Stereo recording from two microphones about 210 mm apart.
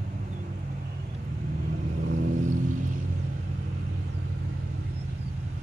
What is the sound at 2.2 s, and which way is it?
Vehicle, 35° right (ahead or behind).